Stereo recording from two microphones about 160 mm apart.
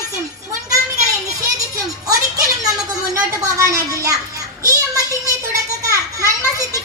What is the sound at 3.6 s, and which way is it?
Speech, 20° right (ahead or behind).